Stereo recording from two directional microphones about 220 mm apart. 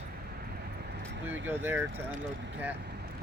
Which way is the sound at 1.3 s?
10° right (ahead or behind).